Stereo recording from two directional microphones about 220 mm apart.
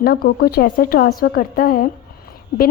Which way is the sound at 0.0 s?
40° left (ahead or behind).